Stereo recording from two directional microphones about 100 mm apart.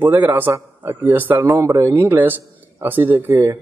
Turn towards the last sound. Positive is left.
turn(degrees=-20)  # may be behind; listen again after turning